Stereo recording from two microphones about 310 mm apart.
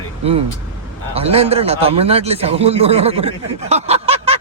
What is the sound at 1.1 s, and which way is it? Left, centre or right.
A man's voice, centre.